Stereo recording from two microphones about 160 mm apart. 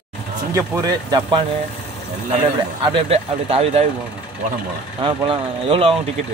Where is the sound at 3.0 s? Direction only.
40° right (ahead or behind).